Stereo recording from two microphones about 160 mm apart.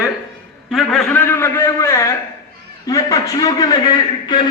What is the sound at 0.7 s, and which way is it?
Speech, centre (ahead or behind).